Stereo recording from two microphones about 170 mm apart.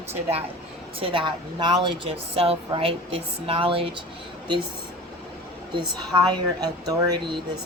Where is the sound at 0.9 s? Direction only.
30° right (ahead or behind).